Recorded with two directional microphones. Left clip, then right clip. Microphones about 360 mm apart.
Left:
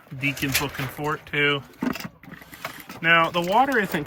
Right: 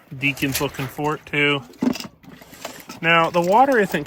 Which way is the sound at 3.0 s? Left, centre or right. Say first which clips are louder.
Right 3 dB; centre.